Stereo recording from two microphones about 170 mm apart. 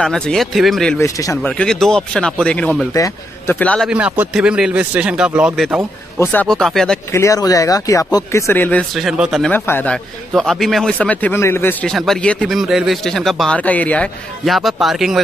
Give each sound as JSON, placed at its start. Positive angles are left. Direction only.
{"t": 0.0, "sound": "speech", "side_deg": 5}
{"t": 0.9, "sound": "speech", "side_deg": 20}
{"t": 1.6, "sound": "speech", "side_deg": 5}
{"t": 3.9, "sound": "speech", "side_deg": -5}
{"t": 6.1, "sound": "speech", "side_deg": 15}
{"t": 6.4, "sound": "speech", "side_deg": 0}
{"t": 7.1, "sound": "speech", "side_deg": 15}
{"t": 8.9, "sound": "speech", "side_deg": -5}
{"t": 9.5, "sound": "speech", "side_deg": 10}